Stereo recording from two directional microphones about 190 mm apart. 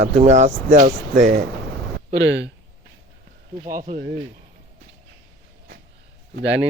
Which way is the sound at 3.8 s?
55° right (ahead or behind).